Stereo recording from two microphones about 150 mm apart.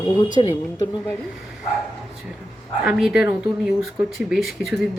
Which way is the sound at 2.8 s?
5° right (ahead or behind).